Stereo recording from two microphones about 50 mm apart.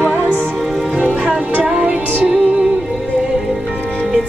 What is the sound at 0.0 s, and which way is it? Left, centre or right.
Music, right.